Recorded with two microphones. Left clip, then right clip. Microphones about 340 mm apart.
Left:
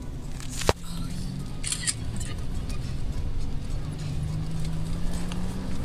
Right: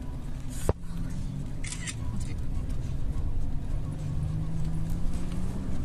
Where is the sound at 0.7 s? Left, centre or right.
Left.